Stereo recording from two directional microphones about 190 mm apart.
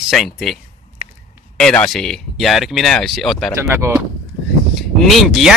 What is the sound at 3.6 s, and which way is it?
Speech, 15° right (ahead or behind).